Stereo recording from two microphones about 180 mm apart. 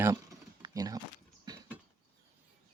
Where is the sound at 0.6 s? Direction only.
20° right (ahead or behind).